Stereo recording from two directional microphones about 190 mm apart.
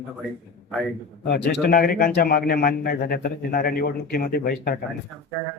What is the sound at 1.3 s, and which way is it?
A man's voice, 60° left (ahead or behind).